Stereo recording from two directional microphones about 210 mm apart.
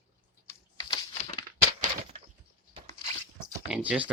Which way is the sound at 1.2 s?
30° left (ahead or behind).